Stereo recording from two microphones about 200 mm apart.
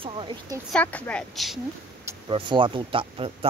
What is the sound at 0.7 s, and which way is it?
Speech, 5° left (ahead or behind).